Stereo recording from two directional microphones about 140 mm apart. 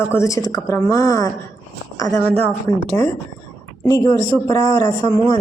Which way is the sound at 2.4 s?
15° left (ahead or behind).